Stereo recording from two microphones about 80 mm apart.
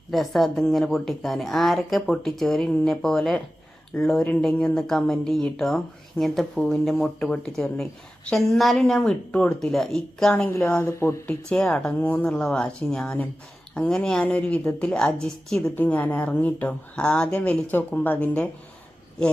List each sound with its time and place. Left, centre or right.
0.1 s a woman's voice: centre
4.5 s speech: centre
4.8 s a woman's voice: centre
9.3 s speech: centre
9.6 s a woman's voice: centre
10.7 s speech: left
11.4 s speech: centre
15.7 s speech: left